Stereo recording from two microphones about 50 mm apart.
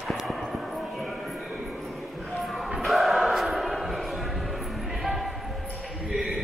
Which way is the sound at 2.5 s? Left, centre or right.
Centre.